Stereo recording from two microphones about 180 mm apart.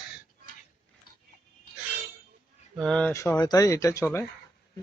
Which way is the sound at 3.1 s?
15° left (ahead or behind).